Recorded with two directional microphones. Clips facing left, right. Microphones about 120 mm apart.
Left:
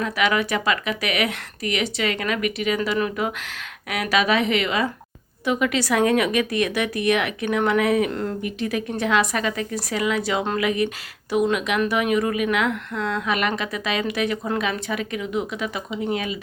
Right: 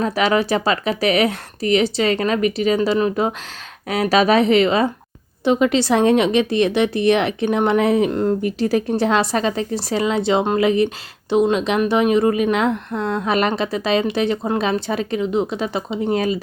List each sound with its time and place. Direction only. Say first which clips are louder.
0.0 s a woman's voice: right 4 dB; 30° right (ahead or behind)
8.4 s a woman's voice: right 7 dB; 35° right (ahead or behind)